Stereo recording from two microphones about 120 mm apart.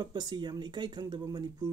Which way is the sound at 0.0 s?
35° right (ahead or behind).